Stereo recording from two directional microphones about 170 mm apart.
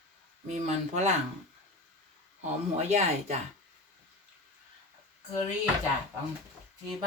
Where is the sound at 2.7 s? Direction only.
40° right (ahead or behind).